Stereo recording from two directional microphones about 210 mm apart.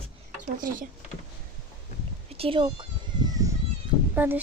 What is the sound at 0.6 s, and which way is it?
Speech, 40° right (ahead or behind).